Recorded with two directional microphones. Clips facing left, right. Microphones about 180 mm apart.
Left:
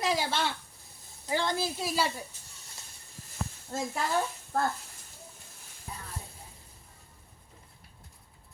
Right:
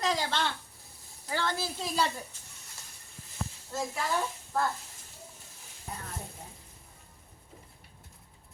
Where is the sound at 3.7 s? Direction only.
50° left (ahead or behind).